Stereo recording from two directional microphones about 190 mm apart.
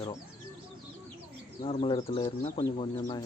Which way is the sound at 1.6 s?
30° left (ahead or behind).